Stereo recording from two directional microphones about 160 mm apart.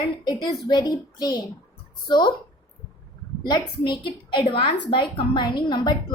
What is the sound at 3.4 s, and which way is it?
A woman's voice, 25° left (ahead or behind).